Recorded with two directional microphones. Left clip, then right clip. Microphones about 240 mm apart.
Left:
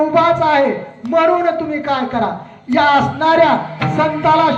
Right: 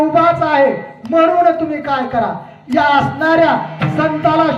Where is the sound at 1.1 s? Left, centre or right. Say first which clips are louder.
Right 2 dB; left.